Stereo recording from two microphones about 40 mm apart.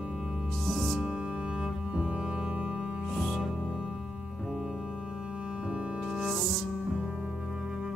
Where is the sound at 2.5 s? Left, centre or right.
Right.